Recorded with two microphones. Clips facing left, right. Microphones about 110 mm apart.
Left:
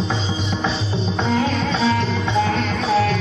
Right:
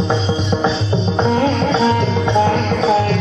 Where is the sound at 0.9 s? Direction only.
25° right (ahead or behind).